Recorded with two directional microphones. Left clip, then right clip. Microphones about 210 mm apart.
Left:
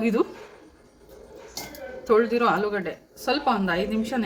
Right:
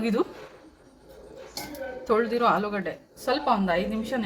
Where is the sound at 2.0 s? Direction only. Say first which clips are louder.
Left 2 dB; 15° left (ahead or behind).